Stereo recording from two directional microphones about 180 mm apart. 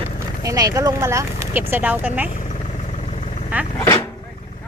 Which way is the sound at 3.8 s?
20° left (ahead or behind).